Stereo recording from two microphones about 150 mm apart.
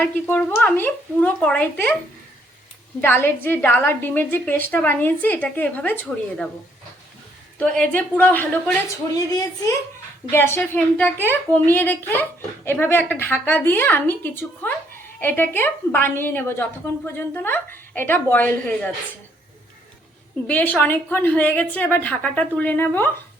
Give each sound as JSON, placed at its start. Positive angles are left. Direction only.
{"t": 0.0, "sound": "a woman's voice", "side_deg": 10}
{"t": 3.0, "sound": "a woman's voice", "side_deg": 15}
{"t": 7.6, "sound": "a woman's voice", "side_deg": 10}
{"t": 9.1, "sound": "a woman's voice", "side_deg": 25}
{"t": 20.5, "sound": "a woman's voice", "side_deg": 10}